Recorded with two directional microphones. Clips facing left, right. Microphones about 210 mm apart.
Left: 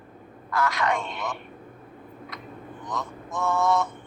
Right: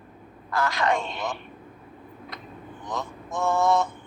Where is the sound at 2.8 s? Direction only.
30° right (ahead or behind).